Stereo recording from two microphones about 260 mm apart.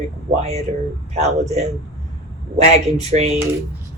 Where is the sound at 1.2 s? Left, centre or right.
Right.